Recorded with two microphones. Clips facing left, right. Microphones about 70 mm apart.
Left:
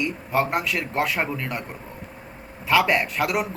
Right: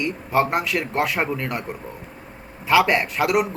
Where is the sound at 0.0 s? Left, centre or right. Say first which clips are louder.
Right 3 dB; centre.